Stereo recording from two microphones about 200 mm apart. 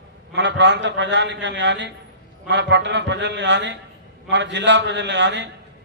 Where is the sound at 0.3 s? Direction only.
60° right (ahead or behind).